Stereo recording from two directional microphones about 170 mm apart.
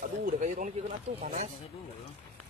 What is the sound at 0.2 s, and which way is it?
Speech, 50° right (ahead or behind).